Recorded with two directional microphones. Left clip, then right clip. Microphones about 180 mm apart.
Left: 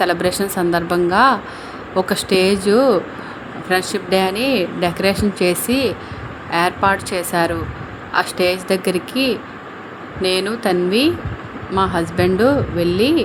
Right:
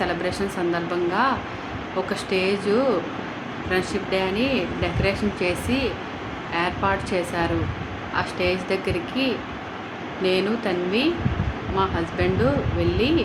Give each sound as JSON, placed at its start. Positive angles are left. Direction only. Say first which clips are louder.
{"t": 0.0, "sound": "speech", "louder": "left 7 dB", "side_deg": 50}